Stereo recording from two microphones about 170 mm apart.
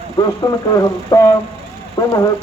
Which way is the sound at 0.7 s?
20° left (ahead or behind).